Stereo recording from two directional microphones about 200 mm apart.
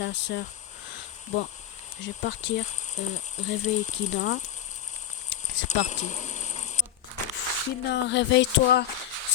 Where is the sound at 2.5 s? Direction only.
35° left (ahead or behind).